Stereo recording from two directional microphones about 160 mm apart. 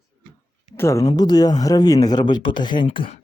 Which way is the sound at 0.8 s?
20° left (ahead or behind).